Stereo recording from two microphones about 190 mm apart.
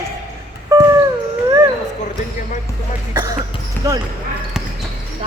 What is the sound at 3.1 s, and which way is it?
Speech, 20° right (ahead or behind).